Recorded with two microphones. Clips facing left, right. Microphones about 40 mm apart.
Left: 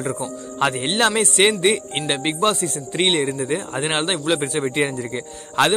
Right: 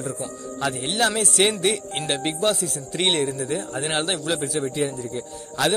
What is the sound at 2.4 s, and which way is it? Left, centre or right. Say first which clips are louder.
A man's voice: left 3 dB; left.